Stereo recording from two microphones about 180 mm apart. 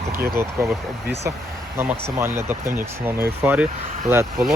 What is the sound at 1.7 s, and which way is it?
Speech, 15° right (ahead or behind).